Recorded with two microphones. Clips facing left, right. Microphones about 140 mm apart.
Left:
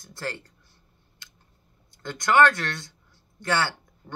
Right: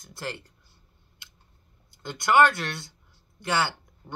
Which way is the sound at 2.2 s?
10° right (ahead or behind).